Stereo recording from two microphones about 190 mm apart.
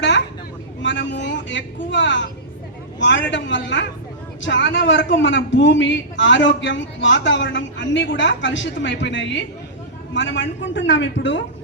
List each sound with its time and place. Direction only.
0.8 s a man's voice: 70° left (ahead or behind)